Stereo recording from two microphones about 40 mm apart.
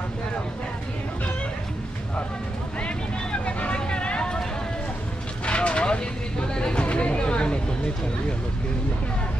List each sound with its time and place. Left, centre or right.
2.8 s vehicle: left
5.4 s vehicle: left
6.5 s a sound: left